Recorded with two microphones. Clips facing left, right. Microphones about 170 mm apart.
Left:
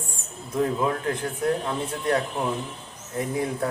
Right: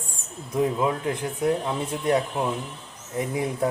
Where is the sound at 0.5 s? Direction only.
15° right (ahead or behind).